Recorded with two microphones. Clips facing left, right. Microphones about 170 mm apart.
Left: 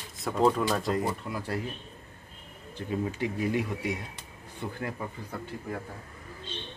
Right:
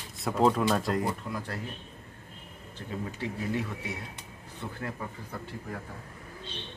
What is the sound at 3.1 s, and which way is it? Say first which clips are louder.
Speech: left 1 dB; 15° left (ahead or behind).